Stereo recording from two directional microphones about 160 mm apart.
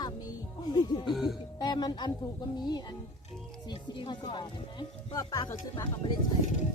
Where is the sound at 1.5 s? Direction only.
25° left (ahead or behind).